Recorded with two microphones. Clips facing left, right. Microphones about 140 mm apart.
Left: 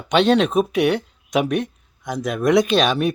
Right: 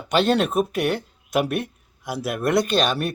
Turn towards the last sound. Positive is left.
turn(degrees=0)  # may be behind; listen again after turning